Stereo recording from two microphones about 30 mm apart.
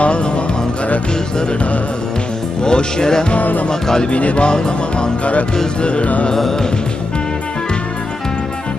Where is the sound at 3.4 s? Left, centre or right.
Left.